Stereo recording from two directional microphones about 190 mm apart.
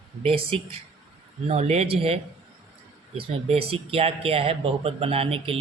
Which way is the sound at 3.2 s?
30° right (ahead or behind).